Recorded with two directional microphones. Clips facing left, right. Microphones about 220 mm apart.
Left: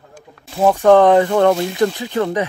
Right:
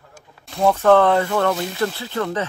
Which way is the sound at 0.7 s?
15° left (ahead or behind).